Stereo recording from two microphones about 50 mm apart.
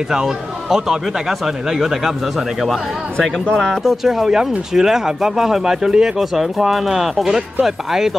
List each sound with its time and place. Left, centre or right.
0.1 s a man's voice: centre
3.8 s speech: centre